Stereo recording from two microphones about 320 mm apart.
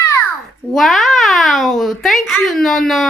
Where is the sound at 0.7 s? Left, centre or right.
Centre.